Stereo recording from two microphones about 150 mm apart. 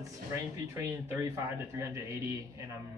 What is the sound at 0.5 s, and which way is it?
A man's voice, 20° right (ahead or behind).